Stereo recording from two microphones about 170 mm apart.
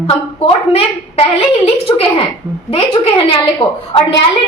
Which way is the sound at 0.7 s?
35° left (ahead or behind).